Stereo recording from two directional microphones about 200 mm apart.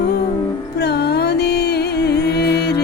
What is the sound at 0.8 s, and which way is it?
Music, 55° left (ahead or behind).